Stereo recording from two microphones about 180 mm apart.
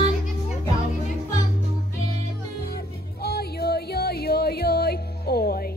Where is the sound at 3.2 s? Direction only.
60° left (ahead or behind).